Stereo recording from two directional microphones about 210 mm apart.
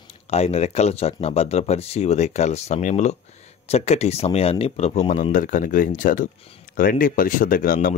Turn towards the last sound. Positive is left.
turn(degrees=40)  # may be behind; listen again after turning